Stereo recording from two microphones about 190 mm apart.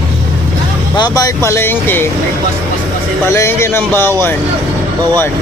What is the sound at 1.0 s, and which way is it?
Speech, 20° left (ahead or behind).